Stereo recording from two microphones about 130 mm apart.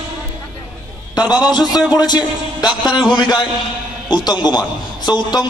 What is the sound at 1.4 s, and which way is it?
A man's voice, 30° left (ahead or behind).